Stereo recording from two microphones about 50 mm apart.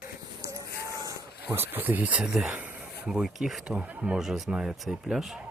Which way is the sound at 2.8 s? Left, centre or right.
Centre.